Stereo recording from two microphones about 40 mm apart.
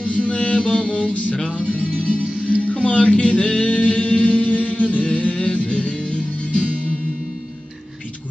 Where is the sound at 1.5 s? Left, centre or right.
Left.